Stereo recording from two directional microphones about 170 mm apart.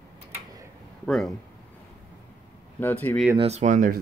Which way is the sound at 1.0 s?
Centre (ahead or behind).